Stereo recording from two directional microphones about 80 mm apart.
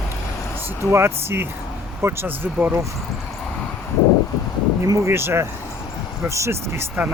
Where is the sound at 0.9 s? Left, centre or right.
Right.